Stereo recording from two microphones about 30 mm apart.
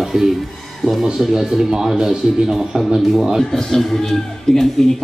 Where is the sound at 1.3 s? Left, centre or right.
Centre.